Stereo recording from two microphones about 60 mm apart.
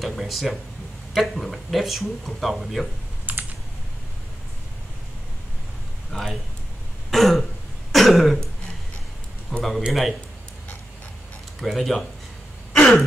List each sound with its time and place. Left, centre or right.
0.0 s speech: centre
3.3 s computer keyboard: right
6.1 s speech: centre
7.1 s throat clearing: centre
9.6 s a sound: centre
11.6 s speech: centre
12.7 s throat clearing: centre